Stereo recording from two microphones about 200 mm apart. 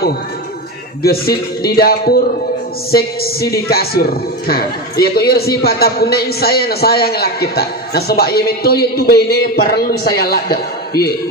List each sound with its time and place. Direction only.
1.0 s a man's voice: 50° left (ahead or behind)